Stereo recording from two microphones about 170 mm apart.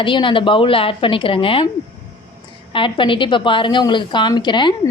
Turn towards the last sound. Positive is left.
turn(degrees=25)  # may be behind; listen again after turning